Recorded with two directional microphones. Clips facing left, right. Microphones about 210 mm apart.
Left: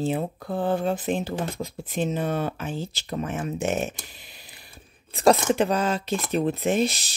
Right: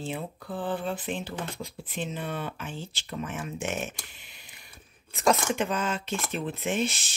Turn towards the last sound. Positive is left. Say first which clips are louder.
# left 6 dB
turn(degrees=40)  # may be behind; listen again after turning